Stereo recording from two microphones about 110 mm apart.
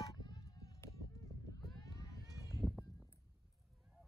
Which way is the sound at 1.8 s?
35° left (ahead or behind).